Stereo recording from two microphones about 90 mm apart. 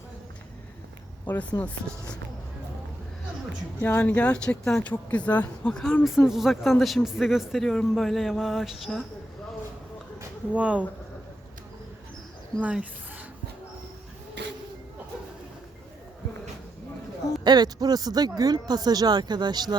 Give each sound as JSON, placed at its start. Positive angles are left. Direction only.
{"t": 1.3, "sound": "speech", "side_deg": 20}
{"t": 3.8, "sound": "speech", "side_deg": 20}
{"t": 6.0, "sound": "speech", "side_deg": -5}
{"t": 10.5, "sound": "speech", "side_deg": -15}
{"t": 12.6, "sound": "speech", "side_deg": -15}
{"t": 17.4, "sound": "speech", "side_deg": -50}